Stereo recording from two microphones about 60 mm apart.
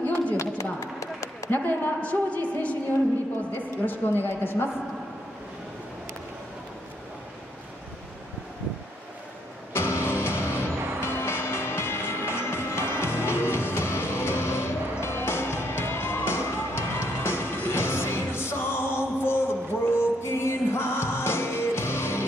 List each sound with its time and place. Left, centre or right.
0.0 s a sound: left
0.4 s a sound: left
1.5 s a woman's voice: left
2.0 s a woman's voice: left
4.3 s a woman's voice: left
9.8 s music: left